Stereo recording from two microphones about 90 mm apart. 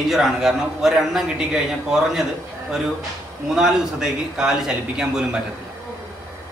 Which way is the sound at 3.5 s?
5° right (ahead or behind).